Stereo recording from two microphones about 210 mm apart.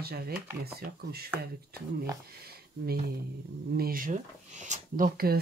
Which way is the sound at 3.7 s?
45° right (ahead or behind).